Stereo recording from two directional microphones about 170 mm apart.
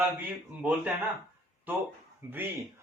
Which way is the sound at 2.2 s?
15° right (ahead or behind).